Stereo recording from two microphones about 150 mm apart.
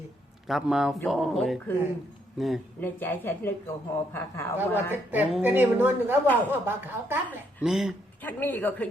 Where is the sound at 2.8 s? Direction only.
15° left (ahead or behind).